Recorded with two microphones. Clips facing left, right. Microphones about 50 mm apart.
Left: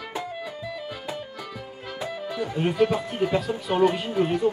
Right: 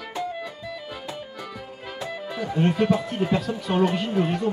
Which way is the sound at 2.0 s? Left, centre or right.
Centre.